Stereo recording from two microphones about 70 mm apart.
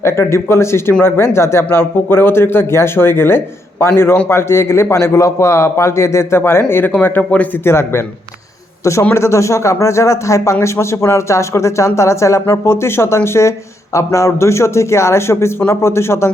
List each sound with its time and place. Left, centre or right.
0.0 s a man's voice: left
7.6 s a man's voice: left